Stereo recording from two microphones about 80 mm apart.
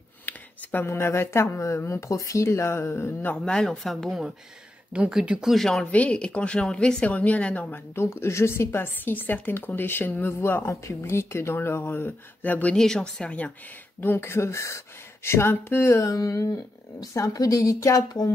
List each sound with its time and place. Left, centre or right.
0.2 s speech: left
3.4 s speech: centre
5.5 s speech: centre
5.9 s a woman's voice: centre
7.9 s a woman's voice: left
12.7 s a woman's voice: centre
14.0 s speech: left